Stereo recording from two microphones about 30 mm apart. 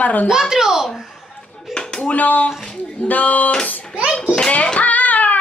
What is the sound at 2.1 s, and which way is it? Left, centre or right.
A woman's voice, left.